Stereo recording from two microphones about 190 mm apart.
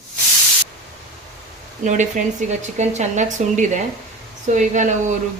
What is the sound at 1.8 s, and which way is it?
Speech, 40° right (ahead or behind).